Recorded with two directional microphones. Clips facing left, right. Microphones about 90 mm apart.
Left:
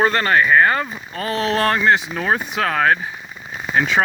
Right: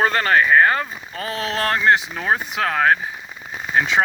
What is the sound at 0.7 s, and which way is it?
Speech, 40° left (ahead or behind).